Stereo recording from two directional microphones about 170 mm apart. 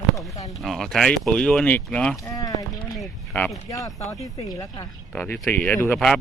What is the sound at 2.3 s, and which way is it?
Speech, 20° left (ahead or behind).